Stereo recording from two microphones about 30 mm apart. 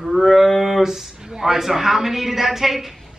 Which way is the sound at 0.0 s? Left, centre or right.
Centre.